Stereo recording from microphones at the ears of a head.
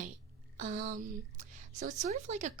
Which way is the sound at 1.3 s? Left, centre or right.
Right.